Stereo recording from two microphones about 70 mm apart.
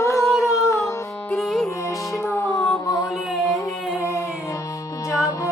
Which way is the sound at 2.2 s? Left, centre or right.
Left.